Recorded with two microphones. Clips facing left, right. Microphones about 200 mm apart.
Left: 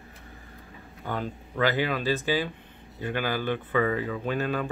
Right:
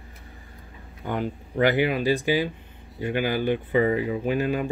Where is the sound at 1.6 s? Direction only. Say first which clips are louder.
Right 4 dB; 15° right (ahead or behind).